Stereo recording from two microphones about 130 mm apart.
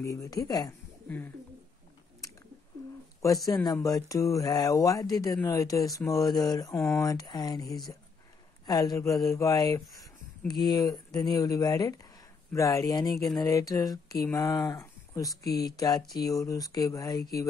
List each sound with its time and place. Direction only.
0.0 s speech: 25° left (ahead or behind)
1.0 s speech: 15° left (ahead or behind)
3.6 s speech: 30° left (ahead or behind)
8.6 s speech: 30° left (ahead or behind)